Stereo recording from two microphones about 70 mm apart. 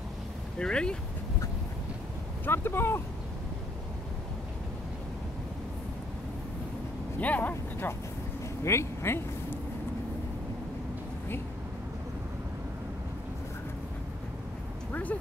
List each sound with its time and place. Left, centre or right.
0.6 s speech: centre
2.4 s speech: left
7.2 s vehicle: left
8.6 s speech: left
14.9 s a sound: left